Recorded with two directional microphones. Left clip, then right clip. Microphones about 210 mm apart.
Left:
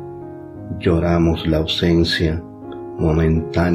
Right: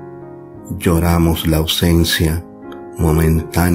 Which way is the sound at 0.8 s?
45° right (ahead or behind).